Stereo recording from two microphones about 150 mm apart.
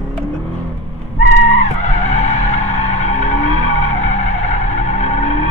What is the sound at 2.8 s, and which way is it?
Skidding, 50° left (ahead or behind).